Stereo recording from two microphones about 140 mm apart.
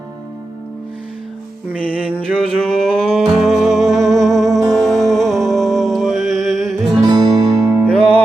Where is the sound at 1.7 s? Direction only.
10° right (ahead or behind).